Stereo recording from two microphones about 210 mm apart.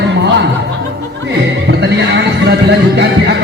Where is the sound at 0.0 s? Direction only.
55° right (ahead or behind).